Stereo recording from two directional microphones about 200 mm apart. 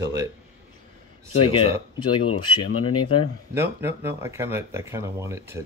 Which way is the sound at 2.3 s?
90° left.